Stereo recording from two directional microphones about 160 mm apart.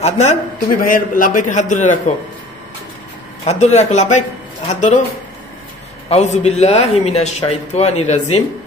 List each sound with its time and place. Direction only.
0.0 s speech: 45° left (ahead or behind)
3.4 s speech: 45° left (ahead or behind)
6.0 s speech: 45° left (ahead or behind)